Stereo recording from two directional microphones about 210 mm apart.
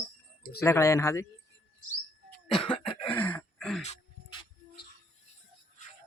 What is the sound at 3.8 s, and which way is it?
Dog, 30° left (ahead or behind).